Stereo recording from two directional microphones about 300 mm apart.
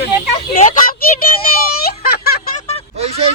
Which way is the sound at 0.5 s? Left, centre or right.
Left.